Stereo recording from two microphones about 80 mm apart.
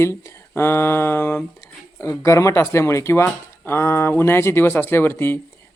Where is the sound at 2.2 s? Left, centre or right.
Left.